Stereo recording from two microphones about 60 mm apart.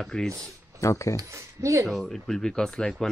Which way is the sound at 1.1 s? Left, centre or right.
Right.